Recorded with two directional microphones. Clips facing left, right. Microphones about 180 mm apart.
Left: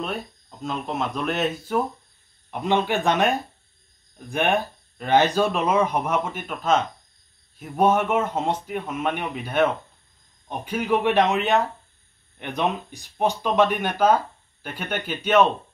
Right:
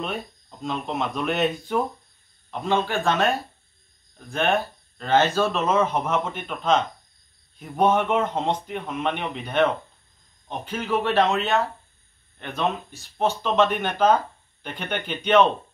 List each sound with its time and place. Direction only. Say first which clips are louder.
0.0 s speech: even; centre (ahead or behind)
2.5 s speech: left 1 dB; 15° left (ahead or behind)